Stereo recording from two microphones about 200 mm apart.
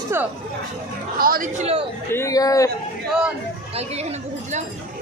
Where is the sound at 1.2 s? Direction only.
45° right (ahead or behind).